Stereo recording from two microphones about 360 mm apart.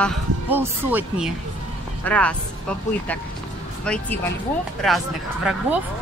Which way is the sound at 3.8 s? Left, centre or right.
Centre.